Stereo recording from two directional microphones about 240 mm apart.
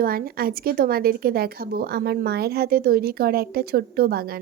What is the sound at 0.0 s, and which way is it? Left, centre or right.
A woman's voice, right.